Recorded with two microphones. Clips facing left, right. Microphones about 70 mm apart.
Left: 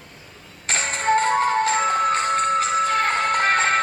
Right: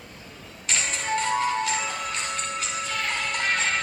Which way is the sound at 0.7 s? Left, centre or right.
Left.